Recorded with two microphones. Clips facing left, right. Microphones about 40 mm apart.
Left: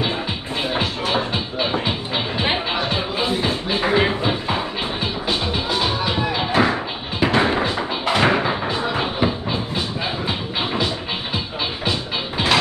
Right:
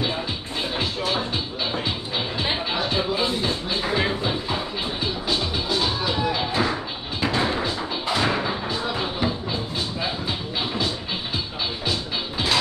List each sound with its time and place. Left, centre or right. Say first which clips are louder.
0.7 s music: left 3 dB; left